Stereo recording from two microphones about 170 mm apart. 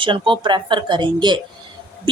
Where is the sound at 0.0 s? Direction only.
30° right (ahead or behind).